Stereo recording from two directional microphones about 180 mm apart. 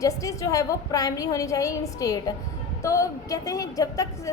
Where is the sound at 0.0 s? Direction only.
20° left (ahead or behind).